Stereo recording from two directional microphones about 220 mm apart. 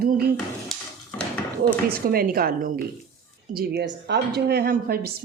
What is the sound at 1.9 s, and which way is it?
A woman's voice, 40° right (ahead or behind).